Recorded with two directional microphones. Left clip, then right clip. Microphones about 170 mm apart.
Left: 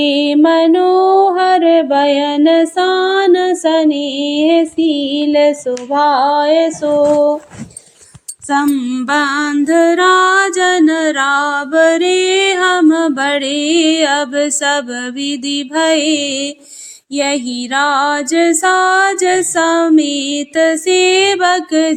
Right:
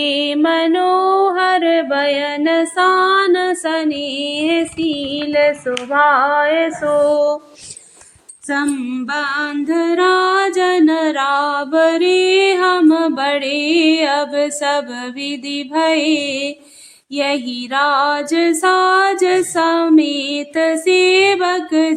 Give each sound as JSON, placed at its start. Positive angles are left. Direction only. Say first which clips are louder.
{"t": 0.0, "sound": "music", "louder": "left 5 dB", "side_deg": 0}
{"t": 8.4, "sound": "music", "louder": "left 5 dB", "side_deg": 20}
{"t": 8.8, "sound": "music", "louder": "left 6 dB", "side_deg": 40}